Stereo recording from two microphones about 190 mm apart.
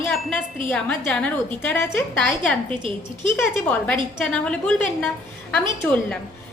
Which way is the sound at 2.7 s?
25° right (ahead or behind).